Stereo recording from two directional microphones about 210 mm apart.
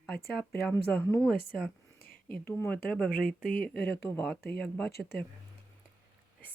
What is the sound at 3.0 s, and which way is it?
Speech, 40° left (ahead or behind).